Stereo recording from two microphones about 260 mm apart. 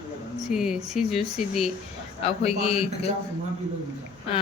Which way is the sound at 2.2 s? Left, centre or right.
Left.